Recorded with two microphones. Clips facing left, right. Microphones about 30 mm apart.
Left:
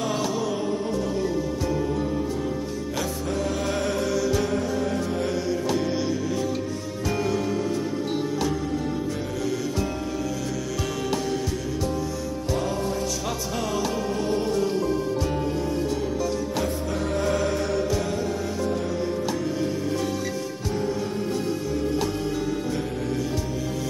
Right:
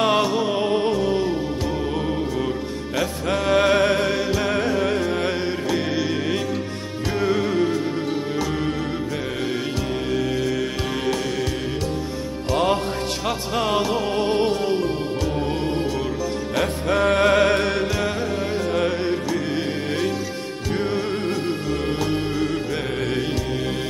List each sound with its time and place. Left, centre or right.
0.0 s music: right
6.0 s music: right
10.1 s music: right
12.5 s music: right
13.2 s music: right
16.5 s music: right
22.4 s music: right